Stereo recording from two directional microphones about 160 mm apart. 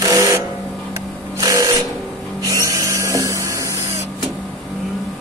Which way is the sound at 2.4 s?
20° right (ahead or behind).